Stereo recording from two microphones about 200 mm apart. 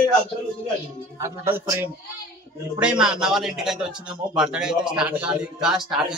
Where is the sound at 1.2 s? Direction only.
15° right (ahead or behind).